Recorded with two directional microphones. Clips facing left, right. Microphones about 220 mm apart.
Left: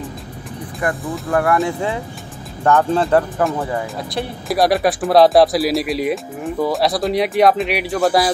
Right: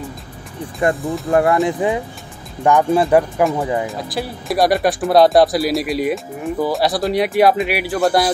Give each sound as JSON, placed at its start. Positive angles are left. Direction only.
{"t": 0.8, "sound": "speech", "side_deg": -25}
{"t": 3.8, "sound": "speech", "side_deg": 0}